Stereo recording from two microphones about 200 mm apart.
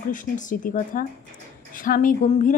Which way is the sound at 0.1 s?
40° left (ahead or behind).